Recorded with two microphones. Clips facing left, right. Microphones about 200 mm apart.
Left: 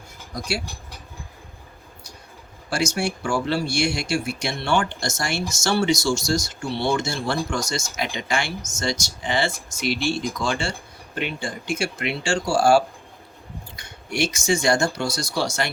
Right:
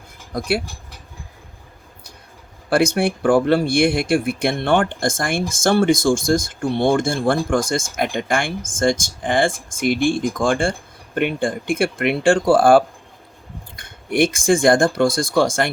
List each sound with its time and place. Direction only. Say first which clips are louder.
0.3 s speech: right 7 dB; 55° right (ahead or behind)
2.6 s speech: right 7 dB; 55° right (ahead or behind)